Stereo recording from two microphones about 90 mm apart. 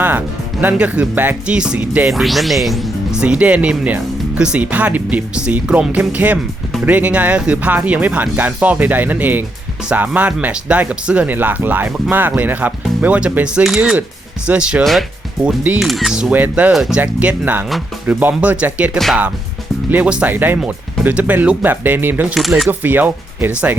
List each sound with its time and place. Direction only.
0.0 s speech: 20° right (ahead or behind)
2.0 s speech: centre (ahead or behind)
3.2 s speech: 15° right (ahead or behind)
15.8 s speech: centre (ahead or behind)
16.3 s speech: 20° right (ahead or behind)
16.7 s speech: 5° right (ahead or behind)
17.0 s speech: 20° right (ahead or behind)
19.9 s speech: 15° right (ahead or behind)
22.4 s speech: centre (ahead or behind)
22.7 s speech: 20° right (ahead or behind)